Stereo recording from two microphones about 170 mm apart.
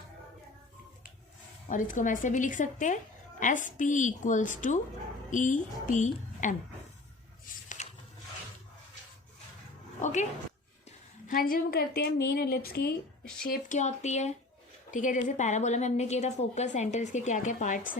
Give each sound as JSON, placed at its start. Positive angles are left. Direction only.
{"t": 1.7, "sound": "a woman's voice", "side_deg": 50}
{"t": 7.4, "sound": "a sound", "side_deg": 50}
{"t": 10.0, "sound": "music", "side_deg": 45}
{"t": 11.3, "sound": "a woman's voice", "side_deg": 60}
{"t": 13.4, "sound": "a woman's voice", "side_deg": 55}